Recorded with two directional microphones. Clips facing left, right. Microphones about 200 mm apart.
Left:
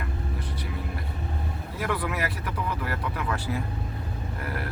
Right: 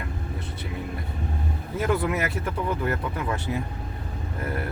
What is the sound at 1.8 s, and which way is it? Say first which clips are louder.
Speech: right 4 dB; 25° right (ahead or behind).